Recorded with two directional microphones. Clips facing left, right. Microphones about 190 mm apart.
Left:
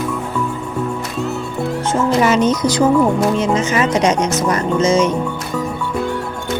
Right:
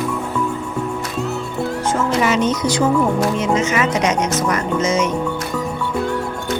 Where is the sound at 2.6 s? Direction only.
35° left (ahead or behind).